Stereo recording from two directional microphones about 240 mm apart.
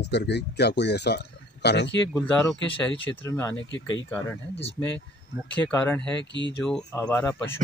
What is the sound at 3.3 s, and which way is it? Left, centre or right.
Speech, centre.